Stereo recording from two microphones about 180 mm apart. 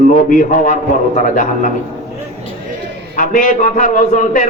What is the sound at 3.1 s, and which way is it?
A man's voice, 50° left (ahead or behind).